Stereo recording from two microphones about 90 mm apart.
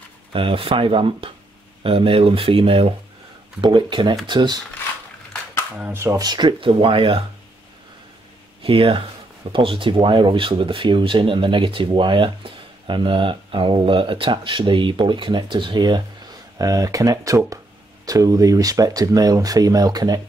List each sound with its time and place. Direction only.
0.3 s speech: 90° right
1.8 s speech: 85° right
3.6 s speech: 65° right (ahead or behind)
5.9 s speech: 35° right (ahead or behind)
6.2 s speech: 55° right (ahead or behind); by 7.2 s 85° right
8.6 s speech: 75° right (ahead or behind); by 16.0 s 55° right (ahead or behind)
16.5 s speech: 40° right (ahead or behind)